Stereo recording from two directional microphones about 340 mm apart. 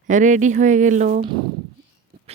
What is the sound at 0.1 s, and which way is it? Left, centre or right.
Speech, right.